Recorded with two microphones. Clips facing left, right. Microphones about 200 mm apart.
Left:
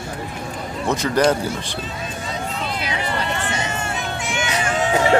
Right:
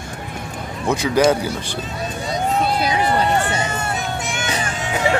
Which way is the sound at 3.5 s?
40° right (ahead or behind).